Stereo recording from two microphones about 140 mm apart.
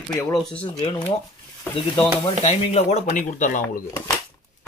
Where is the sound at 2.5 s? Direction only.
50° left (ahead or behind).